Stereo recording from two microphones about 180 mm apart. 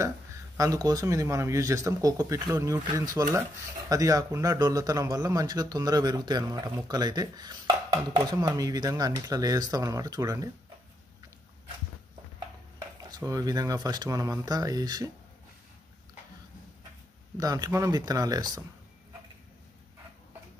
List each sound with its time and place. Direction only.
0.6 s speech: 20° right (ahead or behind)
12.7 s speech: 20° right (ahead or behind)
17.4 s speech: 20° right (ahead or behind)